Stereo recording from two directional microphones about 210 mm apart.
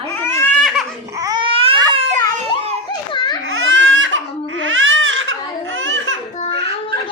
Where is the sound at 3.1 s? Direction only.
20° left (ahead or behind).